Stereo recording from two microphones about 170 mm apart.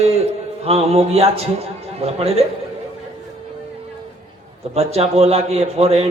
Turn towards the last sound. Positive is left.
turn(degrees=-35)  # may be behind; listen again after turning